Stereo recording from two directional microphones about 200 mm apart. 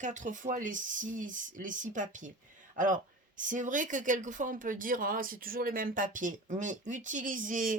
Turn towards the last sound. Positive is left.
turn(degrees=-40)  # may be behind; listen again after turning